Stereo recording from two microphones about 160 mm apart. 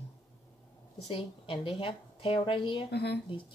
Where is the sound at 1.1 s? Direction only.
30° left (ahead or behind).